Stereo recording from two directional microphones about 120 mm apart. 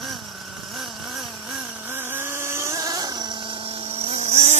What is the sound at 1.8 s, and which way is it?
Vehicle, 15° right (ahead or behind).